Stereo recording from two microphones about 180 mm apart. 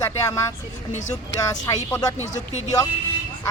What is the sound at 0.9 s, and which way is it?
Speech, 40° left (ahead or behind).